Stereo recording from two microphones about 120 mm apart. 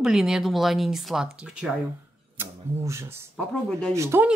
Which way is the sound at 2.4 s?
20° right (ahead or behind).